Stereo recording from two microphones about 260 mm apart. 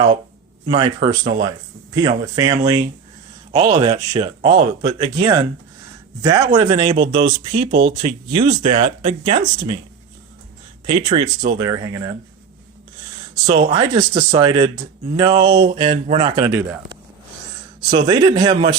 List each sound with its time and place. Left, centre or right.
0.7 s speech: centre
6.9 s speech: right
8.0 s speech: centre
10.8 s speech: right
13.5 s speech: right
18.0 s speech: centre